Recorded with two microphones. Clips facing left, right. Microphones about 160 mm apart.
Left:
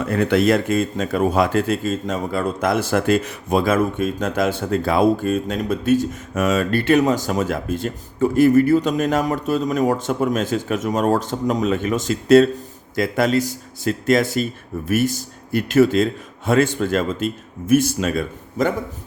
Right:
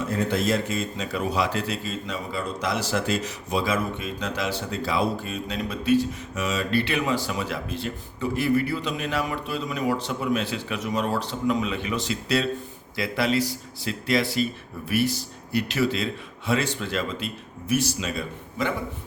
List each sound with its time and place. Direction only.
0.0 s speech: 65° left (ahead or behind); by 18.7 s 50° left (ahead or behind)